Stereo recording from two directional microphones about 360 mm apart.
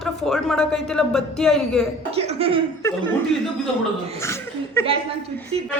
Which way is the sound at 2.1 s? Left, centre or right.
Centre.